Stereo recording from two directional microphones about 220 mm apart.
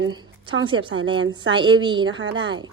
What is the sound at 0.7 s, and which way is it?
Speech, 20° right (ahead or behind).